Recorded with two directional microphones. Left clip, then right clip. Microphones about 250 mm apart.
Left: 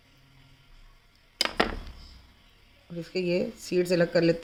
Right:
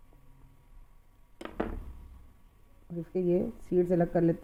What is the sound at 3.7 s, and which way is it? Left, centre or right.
Speech, right.